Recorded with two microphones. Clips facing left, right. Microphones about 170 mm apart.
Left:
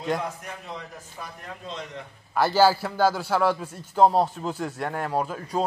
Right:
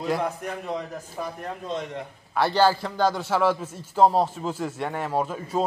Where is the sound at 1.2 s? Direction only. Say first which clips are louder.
Right 8 dB; 50° right (ahead or behind).